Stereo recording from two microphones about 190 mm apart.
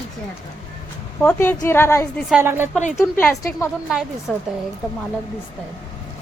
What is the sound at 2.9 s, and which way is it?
Speech, 15° left (ahead or behind).